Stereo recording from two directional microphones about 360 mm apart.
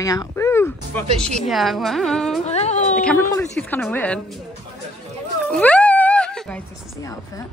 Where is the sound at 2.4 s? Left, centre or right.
Centre.